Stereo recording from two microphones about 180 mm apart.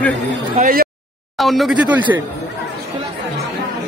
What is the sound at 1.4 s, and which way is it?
Speech, centre (ahead or behind).